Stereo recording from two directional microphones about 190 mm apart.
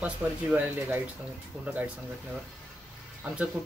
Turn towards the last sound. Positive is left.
turn(degrees=-5)  # may be behind; listen again after turning